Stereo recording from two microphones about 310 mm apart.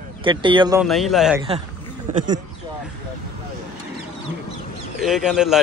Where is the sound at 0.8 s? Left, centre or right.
Centre.